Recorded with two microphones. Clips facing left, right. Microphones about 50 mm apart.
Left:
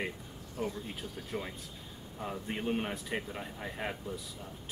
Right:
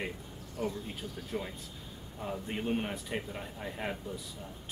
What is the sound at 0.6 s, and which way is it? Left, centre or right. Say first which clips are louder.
Speech: right 1 dB; centre.